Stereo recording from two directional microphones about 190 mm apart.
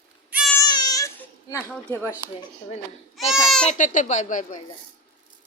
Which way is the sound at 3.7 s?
40° left (ahead or behind).